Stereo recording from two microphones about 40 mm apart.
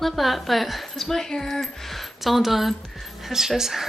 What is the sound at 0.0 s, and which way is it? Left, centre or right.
A woman's voice, centre.